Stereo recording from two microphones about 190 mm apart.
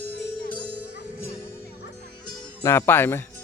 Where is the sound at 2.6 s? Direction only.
15° left (ahead or behind).